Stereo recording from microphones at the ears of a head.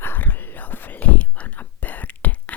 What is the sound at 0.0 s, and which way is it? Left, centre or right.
Whispering, left.